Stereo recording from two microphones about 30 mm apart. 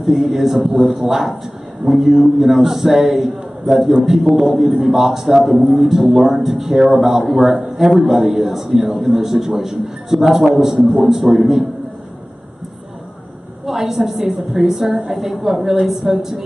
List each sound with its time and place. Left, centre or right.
0.0 s a man's voice: centre
13.7 s a man's voice: centre